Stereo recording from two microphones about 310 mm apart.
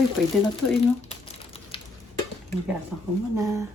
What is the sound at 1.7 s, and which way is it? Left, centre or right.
Stir, centre.